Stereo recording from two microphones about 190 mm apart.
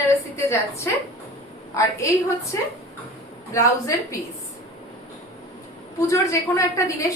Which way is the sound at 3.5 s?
15° left (ahead or behind).